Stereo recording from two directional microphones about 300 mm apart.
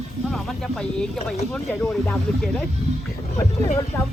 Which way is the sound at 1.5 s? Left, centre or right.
Centre.